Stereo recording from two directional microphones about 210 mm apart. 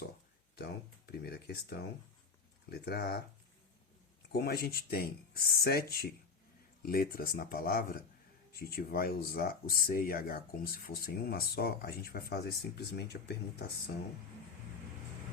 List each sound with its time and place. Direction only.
0.5 s speech: 50° left (ahead or behind)
2.6 s speech: 50° left (ahead or behind)
4.3 s speech: 50° left (ahead or behind)